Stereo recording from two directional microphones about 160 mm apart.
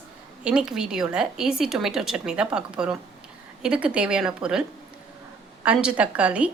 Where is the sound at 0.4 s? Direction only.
5° right (ahead or behind).